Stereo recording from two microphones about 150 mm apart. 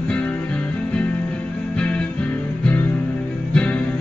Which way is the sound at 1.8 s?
5° left (ahead or behind).